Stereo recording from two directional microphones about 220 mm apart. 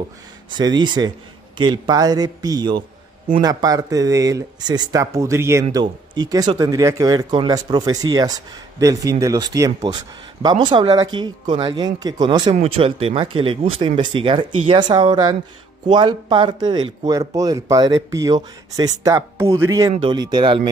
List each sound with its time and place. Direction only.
0.5 s speech: 20° right (ahead or behind)